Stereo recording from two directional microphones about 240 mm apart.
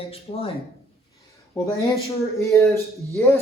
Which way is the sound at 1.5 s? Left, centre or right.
Centre.